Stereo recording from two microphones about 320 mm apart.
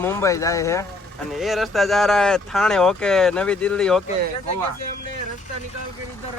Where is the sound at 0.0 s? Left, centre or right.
Centre.